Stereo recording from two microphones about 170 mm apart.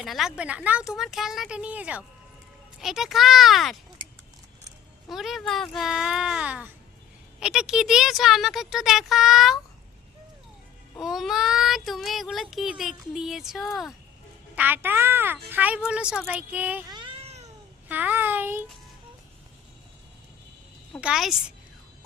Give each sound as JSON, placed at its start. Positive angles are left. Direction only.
{"t": 0.0, "sound": "child singing", "side_deg": 0}
{"t": 5.0, "sound": "child singing", "side_deg": 0}
{"t": 10.9, "sound": "child singing", "side_deg": 0}
{"t": 14.5, "sound": "a woman's voice", "side_deg": -10}
{"t": 16.9, "sound": "a sound", "side_deg": -30}
{"t": 17.8, "sound": "a woman's voice", "side_deg": -10}
{"t": 21.0, "sound": "child singing", "side_deg": -5}